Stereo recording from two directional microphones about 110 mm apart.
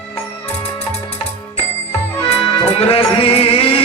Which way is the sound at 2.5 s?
60° left (ahead or behind).